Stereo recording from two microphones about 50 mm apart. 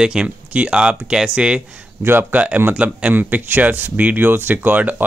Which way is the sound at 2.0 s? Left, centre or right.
Right.